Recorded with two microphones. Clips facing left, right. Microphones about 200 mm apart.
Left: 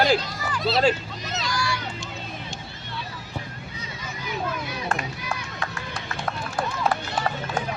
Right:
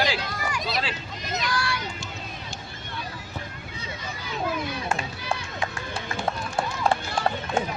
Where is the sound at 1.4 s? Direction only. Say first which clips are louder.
Left 1 dB; 60° right (ahead or behind).